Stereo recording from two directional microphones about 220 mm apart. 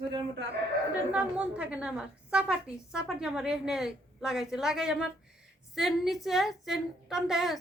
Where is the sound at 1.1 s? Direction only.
5° right (ahead or behind).